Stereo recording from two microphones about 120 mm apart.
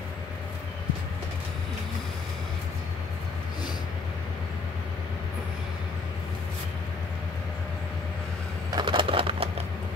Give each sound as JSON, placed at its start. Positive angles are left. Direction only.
{"t": 8.6, "sound": "bird", "side_deg": -40}